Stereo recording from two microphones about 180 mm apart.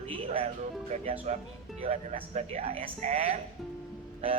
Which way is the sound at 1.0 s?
30° right (ahead or behind).